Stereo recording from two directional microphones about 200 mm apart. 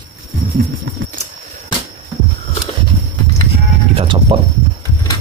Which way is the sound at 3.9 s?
25° right (ahead or behind).